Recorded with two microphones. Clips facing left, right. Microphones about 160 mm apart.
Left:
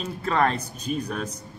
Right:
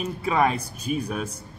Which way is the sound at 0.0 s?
10° right (ahead or behind).